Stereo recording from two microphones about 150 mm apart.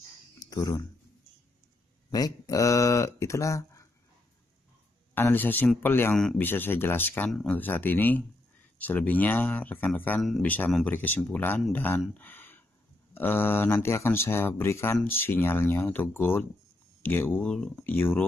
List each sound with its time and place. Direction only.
0.4 s speech: 25° left (ahead or behind)
2.0 s speech: 25° left (ahead or behind)
5.1 s speech: 15° left (ahead or behind)